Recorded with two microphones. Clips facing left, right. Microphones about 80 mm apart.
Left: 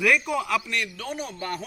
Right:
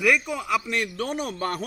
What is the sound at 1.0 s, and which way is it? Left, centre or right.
Speech, right.